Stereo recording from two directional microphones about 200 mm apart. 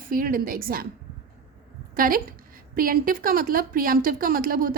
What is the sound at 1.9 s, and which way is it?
A woman's voice, 45° right (ahead or behind).